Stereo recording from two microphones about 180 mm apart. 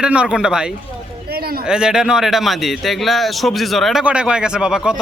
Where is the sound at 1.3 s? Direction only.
55° right (ahead or behind).